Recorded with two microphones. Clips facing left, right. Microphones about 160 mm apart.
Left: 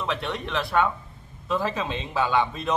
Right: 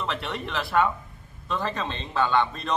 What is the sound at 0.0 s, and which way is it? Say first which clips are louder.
A man's voice: left 2 dB; centre (ahead or behind).